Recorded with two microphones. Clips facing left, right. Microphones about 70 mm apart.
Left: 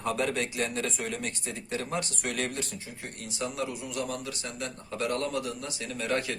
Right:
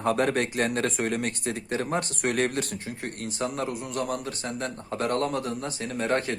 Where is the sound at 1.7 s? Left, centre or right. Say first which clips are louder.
Right 3 dB; right.